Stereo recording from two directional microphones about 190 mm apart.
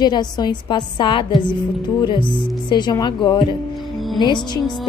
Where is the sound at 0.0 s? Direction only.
20° left (ahead or behind).